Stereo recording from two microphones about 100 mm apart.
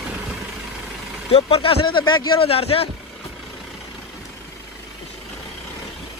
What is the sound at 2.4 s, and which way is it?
Speech, 75° left (ahead or behind).